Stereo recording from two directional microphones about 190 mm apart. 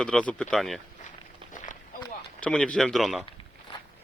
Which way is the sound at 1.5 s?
45° left (ahead or behind).